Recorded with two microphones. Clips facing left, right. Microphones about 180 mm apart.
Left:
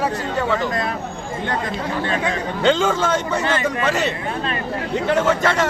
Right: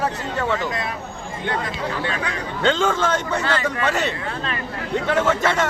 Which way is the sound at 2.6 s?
Centre (ahead or behind).